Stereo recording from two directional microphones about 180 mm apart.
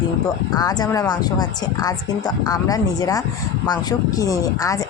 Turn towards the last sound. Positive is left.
turn(degrees=20)  # may be behind; listen again after turning